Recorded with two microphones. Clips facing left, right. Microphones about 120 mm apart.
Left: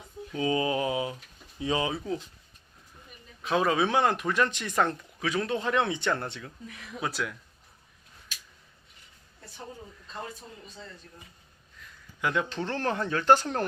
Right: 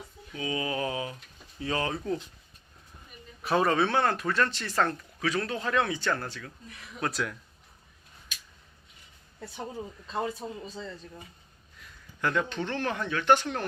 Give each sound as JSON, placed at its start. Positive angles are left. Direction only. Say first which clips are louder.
{"t": 0.3, "sound": "mantra", "louder": "left 4 dB", "side_deg": 30}
{"t": 1.5, "sound": "speech", "louder": "left 2 dB", "side_deg": 15}
{"t": 1.9, "sound": "speech", "louder": "right 1 dB", "side_deg": 0}
{"t": 3.4, "sound": "speech", "louder": "right 1 dB", "side_deg": 0}
{"t": 3.8, "sound": "speech", "louder": "left 1 dB", "side_deg": 15}
{"t": 7.0, "sound": "speech", "louder": "right 1 dB", "side_deg": 0}
{"t": 10.4, "sound": "a man's voice", "louder": "right 9 dB", "side_deg": -90}
{"t": 12.2, "sound": "speech", "louder": "even", "side_deg": 15}
{"t": 12.5, "sound": "speech", "louder": "left 1 dB", "side_deg": 35}